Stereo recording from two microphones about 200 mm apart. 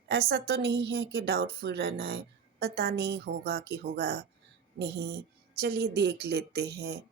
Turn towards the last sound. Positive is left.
turn(degrees=-55)  # may be behind; listen again after turning